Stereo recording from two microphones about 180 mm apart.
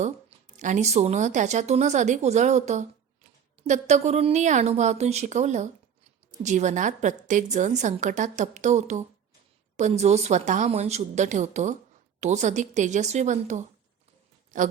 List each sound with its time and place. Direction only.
0.0 s a woman's voice: 40° right (ahead or behind)